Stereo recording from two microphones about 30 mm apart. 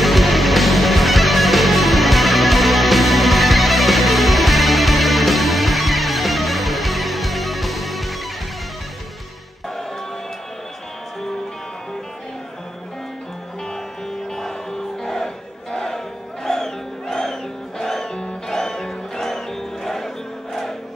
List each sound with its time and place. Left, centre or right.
0.0 s music: centre
14.3 s crowd: centre
16.4 s music: centre
18.0 s music: left
18.5 s music: centre